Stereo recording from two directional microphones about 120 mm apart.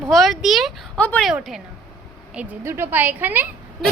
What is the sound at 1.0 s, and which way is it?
Speech, 10° left (ahead or behind).